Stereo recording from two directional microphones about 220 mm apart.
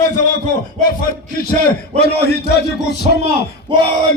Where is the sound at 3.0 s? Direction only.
25° right (ahead or behind).